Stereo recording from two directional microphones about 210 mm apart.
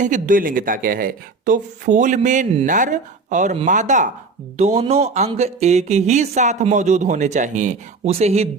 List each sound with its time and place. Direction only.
0.0 s speech: 40° right (ahead or behind)